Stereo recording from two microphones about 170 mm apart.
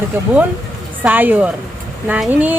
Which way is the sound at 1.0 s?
10° right (ahead or behind).